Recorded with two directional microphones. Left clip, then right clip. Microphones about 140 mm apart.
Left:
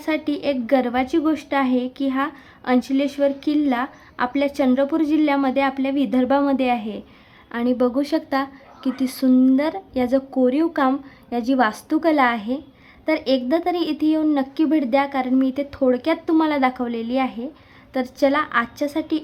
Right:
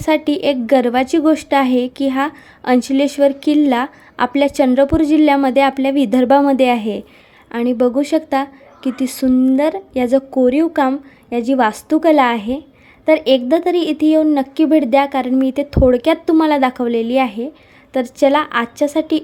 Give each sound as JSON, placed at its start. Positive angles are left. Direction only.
{"t": 0.0, "sound": "a woman's voice", "side_deg": -35}
{"t": 7.5, "sound": "speech", "side_deg": -20}
{"t": 9.3, "sound": "speech", "side_deg": -5}
{"t": 9.6, "sound": "speech", "side_deg": -20}